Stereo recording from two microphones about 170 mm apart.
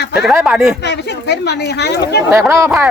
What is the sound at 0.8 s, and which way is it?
Speech, 85° left.